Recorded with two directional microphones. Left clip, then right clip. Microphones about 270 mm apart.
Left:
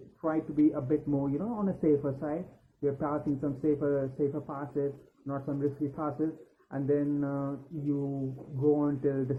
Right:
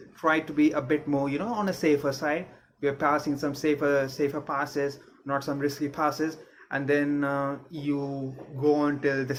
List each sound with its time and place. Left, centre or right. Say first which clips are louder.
0.2 s speech: right 5 dB; right
8.7 s speech: right 5 dB; centre